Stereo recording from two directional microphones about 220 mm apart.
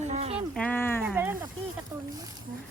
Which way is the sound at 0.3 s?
5° left (ahead or behind).